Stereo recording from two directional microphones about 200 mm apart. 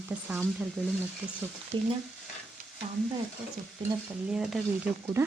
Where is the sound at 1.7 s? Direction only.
25° right (ahead or behind).